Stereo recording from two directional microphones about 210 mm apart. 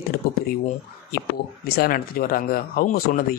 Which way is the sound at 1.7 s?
45° left (ahead or behind).